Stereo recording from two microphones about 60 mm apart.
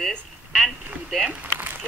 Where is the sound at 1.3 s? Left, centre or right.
Right.